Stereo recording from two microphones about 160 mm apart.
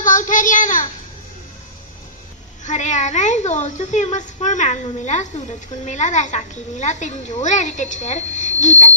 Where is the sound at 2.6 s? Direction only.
50° left (ahead or behind).